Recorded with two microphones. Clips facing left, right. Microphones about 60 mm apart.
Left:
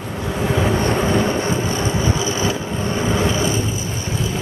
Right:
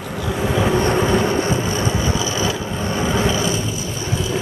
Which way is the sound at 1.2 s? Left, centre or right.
Left.